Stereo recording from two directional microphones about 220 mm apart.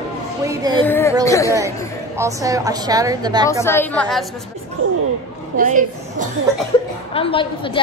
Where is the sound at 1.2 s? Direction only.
15° left (ahead or behind).